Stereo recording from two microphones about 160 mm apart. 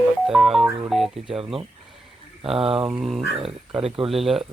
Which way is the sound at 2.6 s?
35° right (ahead or behind).